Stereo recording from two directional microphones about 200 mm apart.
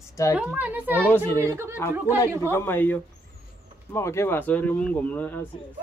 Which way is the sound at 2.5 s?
10° left (ahead or behind).